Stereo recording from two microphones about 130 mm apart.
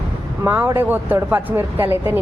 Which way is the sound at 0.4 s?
15° right (ahead or behind).